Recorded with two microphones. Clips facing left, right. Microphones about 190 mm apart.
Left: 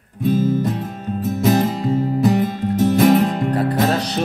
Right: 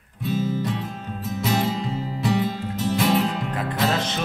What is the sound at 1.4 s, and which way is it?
Music, 50° left (ahead or behind).